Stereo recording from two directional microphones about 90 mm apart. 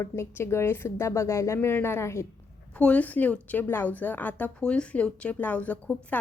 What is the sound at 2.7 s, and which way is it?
A woman's voice, 15° left (ahead or behind).